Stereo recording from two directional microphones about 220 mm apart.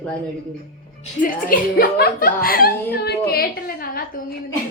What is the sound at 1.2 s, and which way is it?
Speech, 40° left (ahead or behind).